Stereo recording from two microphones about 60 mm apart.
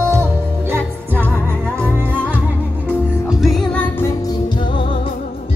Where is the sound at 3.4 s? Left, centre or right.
Centre.